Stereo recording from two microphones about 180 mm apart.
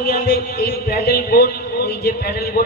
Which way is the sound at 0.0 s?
55° left (ahead or behind).